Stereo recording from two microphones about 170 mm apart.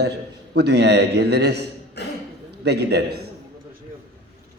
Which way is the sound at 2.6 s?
80° right.